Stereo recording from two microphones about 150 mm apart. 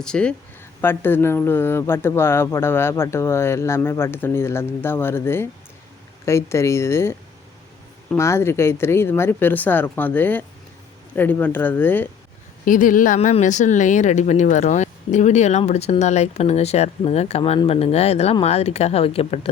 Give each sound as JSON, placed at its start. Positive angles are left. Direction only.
{"t": 0.0, "sound": "speech", "side_deg": 5}
{"t": 12.6, "sound": "speech", "side_deg": 60}
{"t": 13.1, "sound": "speech", "side_deg": 50}